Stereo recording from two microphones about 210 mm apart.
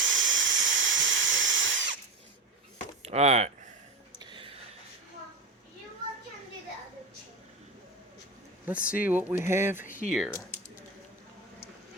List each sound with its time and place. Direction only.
0.0 s drill: 65° right (ahead or behind)
3.0 s speech: 30° right (ahead or behind)
4.2 s a sound: 25° right (ahead or behind)
8.6 s speech: 5° right (ahead or behind)
9.8 s speech: 40° left (ahead or behind)
10.1 s speech: centre (ahead or behind)